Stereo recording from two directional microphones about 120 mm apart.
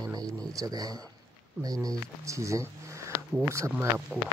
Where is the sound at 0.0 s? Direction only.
30° right (ahead or behind).